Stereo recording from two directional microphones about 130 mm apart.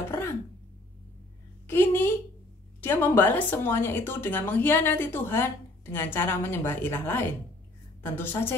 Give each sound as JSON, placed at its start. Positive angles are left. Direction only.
{"t": 1.7, "sound": "a woman's voice", "side_deg": 20}